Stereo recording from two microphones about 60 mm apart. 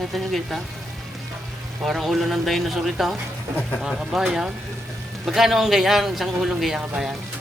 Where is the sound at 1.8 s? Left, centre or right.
Centre.